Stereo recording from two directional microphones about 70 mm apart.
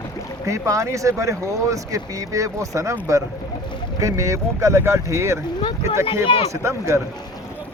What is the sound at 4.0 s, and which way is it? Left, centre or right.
Speech, right.